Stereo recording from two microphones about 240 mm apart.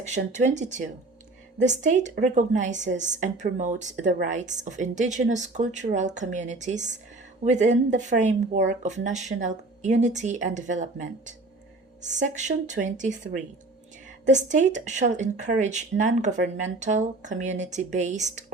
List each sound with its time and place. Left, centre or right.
0.0 s a woman's voice: right